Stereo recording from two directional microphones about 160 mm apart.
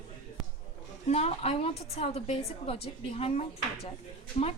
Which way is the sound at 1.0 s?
40° left (ahead or behind).